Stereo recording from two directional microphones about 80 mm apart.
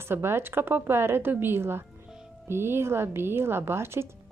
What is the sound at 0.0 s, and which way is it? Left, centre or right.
A woman's voice, right.